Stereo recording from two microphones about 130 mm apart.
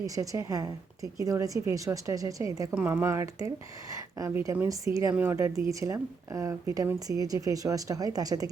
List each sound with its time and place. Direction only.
0.0 s a woman's voice: 25° right (ahead or behind)